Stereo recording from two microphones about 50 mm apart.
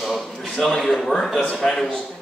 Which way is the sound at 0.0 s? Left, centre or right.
Centre.